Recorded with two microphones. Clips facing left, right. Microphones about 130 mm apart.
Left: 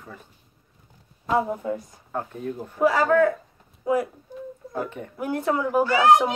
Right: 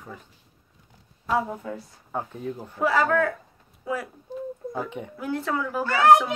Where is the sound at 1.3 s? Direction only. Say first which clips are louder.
Left 3 dB; 20° left (ahead or behind).